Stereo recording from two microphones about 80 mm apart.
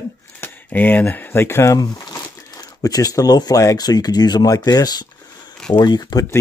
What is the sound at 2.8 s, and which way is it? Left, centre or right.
Speech, left.